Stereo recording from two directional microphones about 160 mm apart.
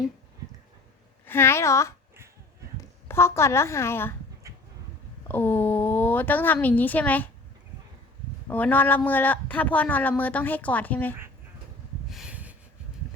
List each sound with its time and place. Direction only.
1.3 s a woman's voice: 15° left (ahead or behind)
3.1 s a woman's voice: 15° left (ahead or behind)
5.3 s a woman's voice: 15° left (ahead or behind)
8.4 s a woman's voice: 10° left (ahead or behind)
12.1 s snort: 5° right (ahead or behind)